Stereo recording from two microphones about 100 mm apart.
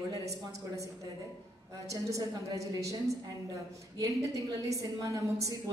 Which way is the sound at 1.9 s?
35° right (ahead or behind).